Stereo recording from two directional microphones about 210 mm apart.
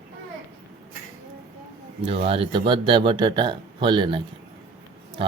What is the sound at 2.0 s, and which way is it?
Speech, 25° right (ahead or behind).